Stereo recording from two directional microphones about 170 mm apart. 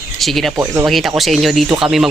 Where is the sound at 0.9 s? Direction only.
Centre (ahead or behind).